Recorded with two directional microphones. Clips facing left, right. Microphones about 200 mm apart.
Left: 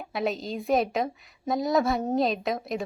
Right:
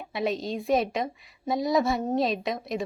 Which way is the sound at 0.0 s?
Centre (ahead or behind).